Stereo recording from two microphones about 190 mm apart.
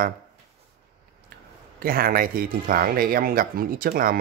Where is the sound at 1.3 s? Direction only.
55° right (ahead or behind).